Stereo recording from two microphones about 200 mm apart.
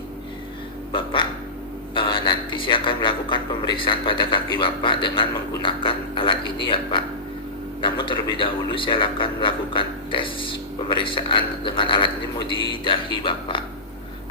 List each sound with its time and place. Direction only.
0.9 s speech: 25° left (ahead or behind)